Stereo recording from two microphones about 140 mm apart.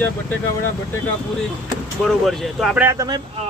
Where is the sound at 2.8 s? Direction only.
20° right (ahead or behind).